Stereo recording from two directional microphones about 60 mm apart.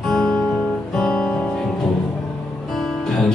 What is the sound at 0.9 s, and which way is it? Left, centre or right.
Music, centre.